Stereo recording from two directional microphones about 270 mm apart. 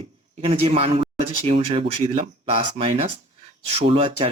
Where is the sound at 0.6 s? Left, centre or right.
Right.